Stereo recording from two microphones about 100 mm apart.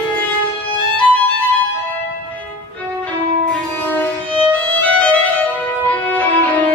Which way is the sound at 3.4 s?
15° left (ahead or behind).